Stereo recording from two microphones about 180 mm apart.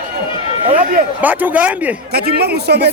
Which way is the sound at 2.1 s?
60° right (ahead or behind).